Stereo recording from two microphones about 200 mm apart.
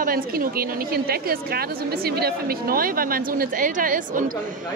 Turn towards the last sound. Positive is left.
turn(degrees=-40)  # may be behind; listen again after turning